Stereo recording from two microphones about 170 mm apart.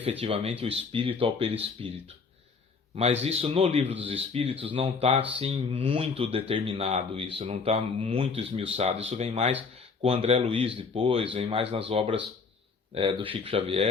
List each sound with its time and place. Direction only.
0.0 s speech: 35° right (ahead or behind)
2.9 s speech: 40° right (ahead or behind)
7.4 s speech: 45° right (ahead or behind)
8.4 s speech: 35° right (ahead or behind)